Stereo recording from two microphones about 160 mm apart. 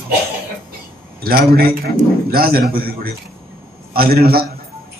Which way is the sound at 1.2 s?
70° right (ahead or behind).